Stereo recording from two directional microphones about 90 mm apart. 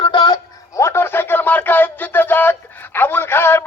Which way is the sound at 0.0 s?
60° left (ahead or behind).